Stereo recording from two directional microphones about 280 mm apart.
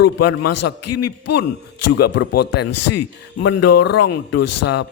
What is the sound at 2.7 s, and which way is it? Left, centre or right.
A man's voice, left.